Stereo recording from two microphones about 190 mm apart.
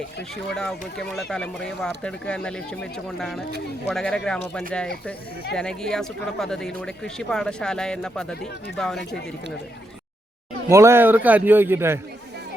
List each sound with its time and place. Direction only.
0.5 s speech: 5° left (ahead or behind)
5.5 s speech: 5° left (ahead or behind)
10.7 s a man's voice: 15° right (ahead or behind)